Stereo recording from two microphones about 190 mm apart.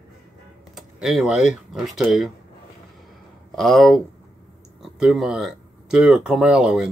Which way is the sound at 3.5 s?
Centre (ahead or behind).